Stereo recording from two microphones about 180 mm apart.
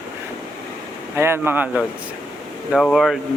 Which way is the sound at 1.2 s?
15° right (ahead or behind).